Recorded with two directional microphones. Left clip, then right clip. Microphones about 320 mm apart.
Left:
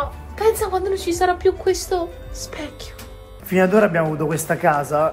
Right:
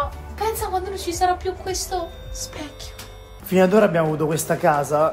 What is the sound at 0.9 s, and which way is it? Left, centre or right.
A woman's voice, left.